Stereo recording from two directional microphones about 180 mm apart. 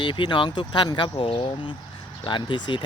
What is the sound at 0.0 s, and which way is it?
Speech, 25° left (ahead or behind).